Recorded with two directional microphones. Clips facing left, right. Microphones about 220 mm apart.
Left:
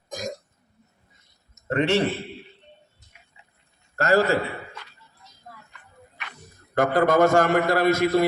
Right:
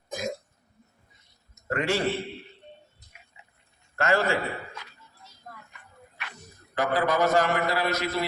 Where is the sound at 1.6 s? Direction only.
25° left (ahead or behind).